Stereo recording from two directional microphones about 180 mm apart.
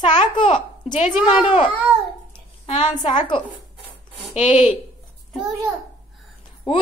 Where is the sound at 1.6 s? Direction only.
Centre (ahead or behind).